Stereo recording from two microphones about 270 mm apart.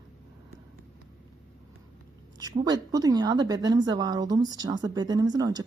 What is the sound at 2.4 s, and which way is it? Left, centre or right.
A woman's voice, centre.